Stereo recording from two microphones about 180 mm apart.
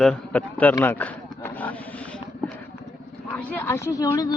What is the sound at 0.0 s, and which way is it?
Speech, 5° left (ahead or behind).